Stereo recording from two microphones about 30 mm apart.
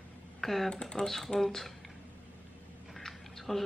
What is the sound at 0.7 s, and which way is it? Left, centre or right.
Speech, left.